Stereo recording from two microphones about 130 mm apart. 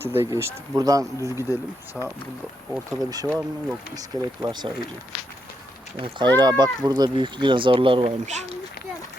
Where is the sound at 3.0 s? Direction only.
30° right (ahead or behind).